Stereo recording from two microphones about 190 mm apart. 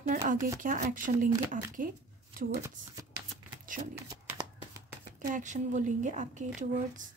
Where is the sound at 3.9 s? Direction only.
20° right (ahead or behind).